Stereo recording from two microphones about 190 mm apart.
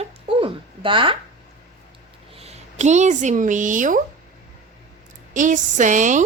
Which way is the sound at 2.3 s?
35° right (ahead or behind).